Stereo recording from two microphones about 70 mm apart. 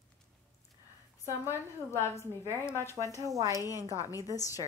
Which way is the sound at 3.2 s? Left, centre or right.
Right.